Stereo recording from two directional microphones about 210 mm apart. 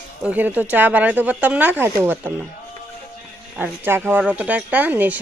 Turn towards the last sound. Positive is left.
turn(degrees=-10)  # may be behind; listen again after turning